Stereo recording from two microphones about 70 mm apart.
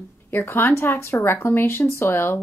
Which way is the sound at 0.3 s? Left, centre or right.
Left.